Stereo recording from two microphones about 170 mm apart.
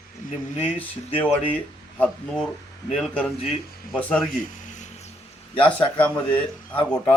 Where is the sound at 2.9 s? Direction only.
Centre (ahead or behind).